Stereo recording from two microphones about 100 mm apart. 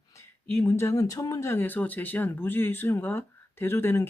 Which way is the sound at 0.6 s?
25° left (ahead or behind).